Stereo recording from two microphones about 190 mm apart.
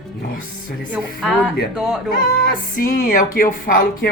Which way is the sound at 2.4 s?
45° left (ahead or behind).